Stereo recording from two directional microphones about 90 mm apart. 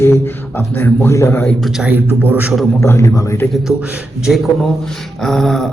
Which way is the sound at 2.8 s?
30° left (ahead or behind).